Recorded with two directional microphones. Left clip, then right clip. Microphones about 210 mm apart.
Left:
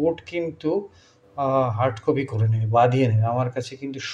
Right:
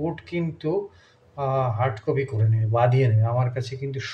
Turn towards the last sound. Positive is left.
turn(degrees=25)  # may be behind; listen again after turning